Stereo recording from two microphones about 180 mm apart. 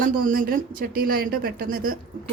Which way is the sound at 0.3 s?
50° right (ahead or behind).